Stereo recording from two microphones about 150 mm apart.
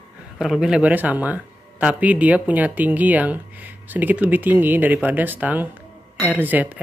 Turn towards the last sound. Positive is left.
turn(degrees=-10)  # may be behind; listen again after turning